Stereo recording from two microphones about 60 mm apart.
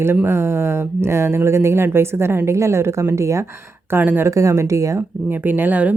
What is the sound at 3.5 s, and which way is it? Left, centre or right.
Speech, right.